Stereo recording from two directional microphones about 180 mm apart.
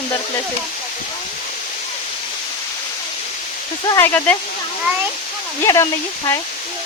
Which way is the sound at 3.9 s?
15° left (ahead or behind).